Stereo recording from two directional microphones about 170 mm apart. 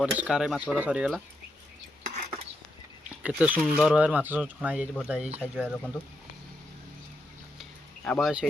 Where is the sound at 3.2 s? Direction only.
10° right (ahead or behind).